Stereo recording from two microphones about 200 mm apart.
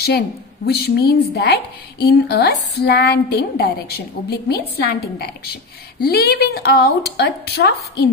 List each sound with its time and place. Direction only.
0.7 s a woman's voice: 55° left (ahead or behind)